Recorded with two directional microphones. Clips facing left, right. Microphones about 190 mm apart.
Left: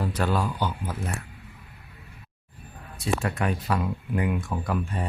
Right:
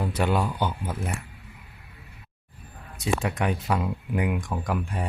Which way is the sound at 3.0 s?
15° right (ahead or behind).